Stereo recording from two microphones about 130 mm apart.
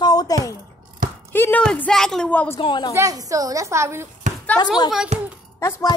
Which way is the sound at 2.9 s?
25° right (ahead or behind).